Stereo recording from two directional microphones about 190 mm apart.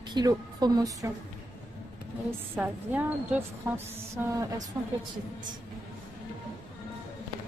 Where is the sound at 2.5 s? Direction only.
10° right (ahead or behind).